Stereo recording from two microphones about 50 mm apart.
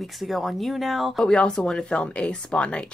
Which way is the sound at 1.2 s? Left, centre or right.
Centre.